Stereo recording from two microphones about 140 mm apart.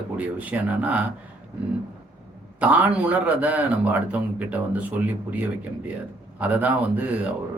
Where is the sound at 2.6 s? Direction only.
10° right (ahead or behind).